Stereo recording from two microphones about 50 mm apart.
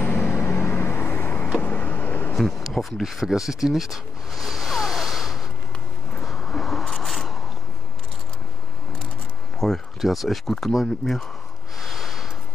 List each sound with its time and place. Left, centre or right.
0.0 s vehicle: left
1.1 s vehicle: left
2.3 s speech: centre
6.2 s a sound: centre
9.6 s a sound: centre
9.9 s speech: centre
11.8 s snort: centre